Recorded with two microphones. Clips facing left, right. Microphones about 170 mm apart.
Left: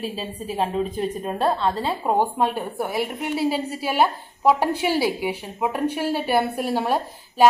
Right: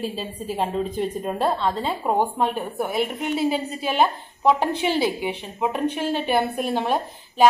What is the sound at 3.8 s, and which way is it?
Speech, 10° left (ahead or behind).